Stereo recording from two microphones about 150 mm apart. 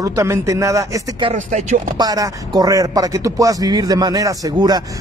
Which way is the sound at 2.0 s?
25° right (ahead or behind).